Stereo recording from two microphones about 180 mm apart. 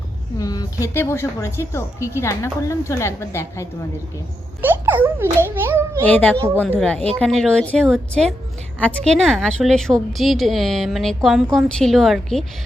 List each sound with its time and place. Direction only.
0.3 s a woman's voice: 20° left (ahead or behind)
4.6 s a child's voice: 10° right (ahead or behind)
6.1 s a woman's voice: 10° left (ahead or behind)